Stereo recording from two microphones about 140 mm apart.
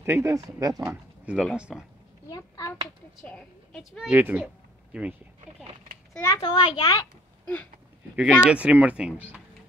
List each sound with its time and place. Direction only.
0.0 s speech: 20° right (ahead or behind)
0.8 s speech: 5° right (ahead or behind)
2.2 s hands: 25° left (ahead or behind)
3.3 s a woman's voice: 5° left (ahead or behind)
4.1 s speech: 10° right (ahead or behind)
6.2 s a child's voice: 30° left (ahead or behind)
8.2 s speech: 10° right (ahead or behind)